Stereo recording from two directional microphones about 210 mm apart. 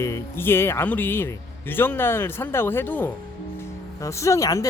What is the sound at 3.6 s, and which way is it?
Music, 15° left (ahead or behind).